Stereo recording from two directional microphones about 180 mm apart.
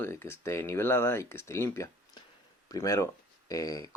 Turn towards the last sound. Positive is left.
turn(degrees=20)  # may be behind; listen again after turning